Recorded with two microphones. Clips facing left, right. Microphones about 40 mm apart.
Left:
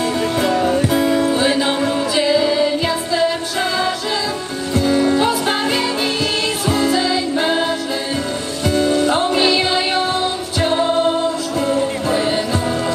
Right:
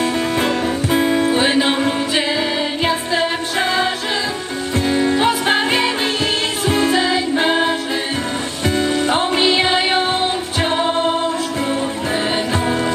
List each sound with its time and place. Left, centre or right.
0.4 s music: right
12.1 s music: right